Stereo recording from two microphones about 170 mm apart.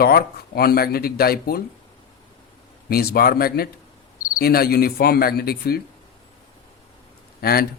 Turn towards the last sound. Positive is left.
turn(degrees=65)  # may be behind; listen again after turning